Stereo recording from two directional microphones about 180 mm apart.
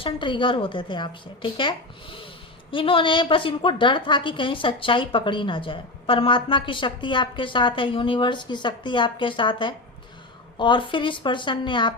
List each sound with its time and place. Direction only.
0.0 s a woman's voice: 25° left (ahead or behind)